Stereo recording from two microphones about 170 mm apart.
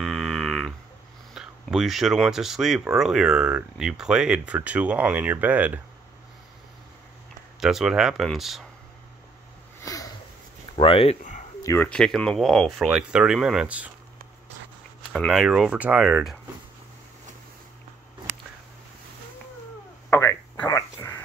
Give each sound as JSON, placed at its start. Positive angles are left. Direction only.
{"t": 0.0, "sound": "a sound", "side_deg": 0}
{"t": 1.3, "sound": "speech", "side_deg": -5}
{"t": 7.6, "sound": "speech", "side_deg": -5}
{"t": 9.8, "sound": "sniff", "side_deg": 20}
{"t": 10.8, "sound": "speech", "side_deg": 30}
{"t": 11.6, "sound": "speech", "side_deg": 10}
{"t": 15.1, "sound": "speech", "side_deg": 0}
{"t": 20.1, "sound": "a sound", "side_deg": 15}